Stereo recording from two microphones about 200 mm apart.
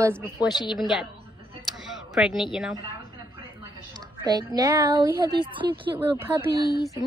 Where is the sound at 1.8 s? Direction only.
5° right (ahead or behind).